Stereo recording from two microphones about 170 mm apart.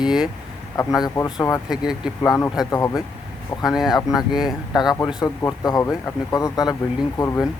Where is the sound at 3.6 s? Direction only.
Centre (ahead or behind).